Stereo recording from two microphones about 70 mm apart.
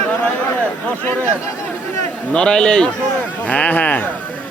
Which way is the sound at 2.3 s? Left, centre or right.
Centre.